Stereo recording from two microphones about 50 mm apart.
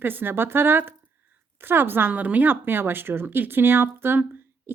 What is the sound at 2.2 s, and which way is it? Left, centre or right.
Speech, right.